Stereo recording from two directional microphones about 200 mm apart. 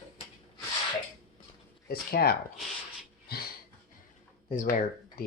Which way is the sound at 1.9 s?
50° left (ahead or behind).